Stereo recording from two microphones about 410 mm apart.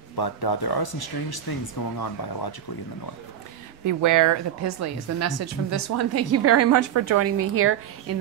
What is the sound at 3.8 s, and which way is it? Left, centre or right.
A woman's voice, right.